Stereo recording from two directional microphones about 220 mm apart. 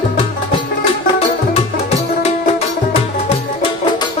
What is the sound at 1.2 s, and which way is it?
Music, 30° left (ahead or behind).